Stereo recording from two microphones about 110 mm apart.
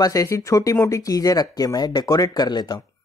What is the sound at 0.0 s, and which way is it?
A man's voice, 30° left (ahead or behind).